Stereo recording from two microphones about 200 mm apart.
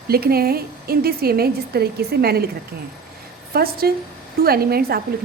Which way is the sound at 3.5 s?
50° right (ahead or behind).